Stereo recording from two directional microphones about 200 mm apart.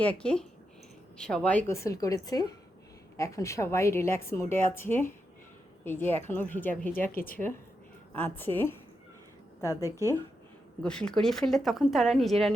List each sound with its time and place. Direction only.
0.0 s a woman's voice: 5° left (ahead or behind)
7.1 s a woman's voice: 45° left (ahead or behind)
7.3 s a woman's voice: 10° left (ahead or behind)
10.8 s a woman's voice: 5° left (ahead or behind)